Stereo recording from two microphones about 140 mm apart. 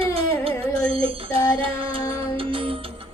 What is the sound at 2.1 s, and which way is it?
Music, 40° right (ahead or behind).